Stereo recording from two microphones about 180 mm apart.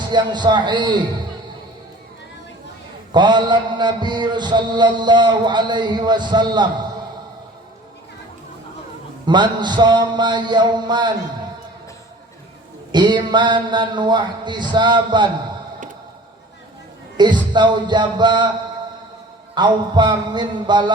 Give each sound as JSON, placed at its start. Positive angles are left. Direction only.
{"t": 0.0, "sound": "mantra", "side_deg": -25}
{"t": 3.1, "sound": "mantra", "side_deg": -25}
{"t": 9.2, "sound": "mantra", "side_deg": -25}
{"t": 12.9, "sound": "mantra", "side_deg": -25}
{"t": 17.2, "sound": "mantra", "side_deg": -25}
{"t": 19.5, "sound": "mantra", "side_deg": -25}